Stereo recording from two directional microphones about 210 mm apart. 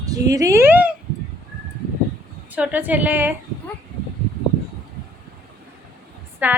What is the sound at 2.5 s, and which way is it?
Speech, 10° right (ahead or behind).